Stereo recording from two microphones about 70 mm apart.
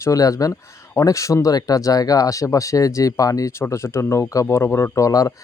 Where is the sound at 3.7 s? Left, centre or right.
Left.